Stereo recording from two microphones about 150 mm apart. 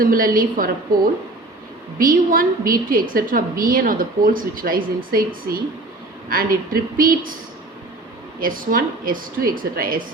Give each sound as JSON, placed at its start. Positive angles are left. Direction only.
{"t": 0.0, "sound": "a woman's voice", "side_deg": -75}
{"t": 6.9, "sound": "a woman's voice", "side_deg": -70}
{"t": 8.4, "sound": "a woman's voice", "side_deg": -70}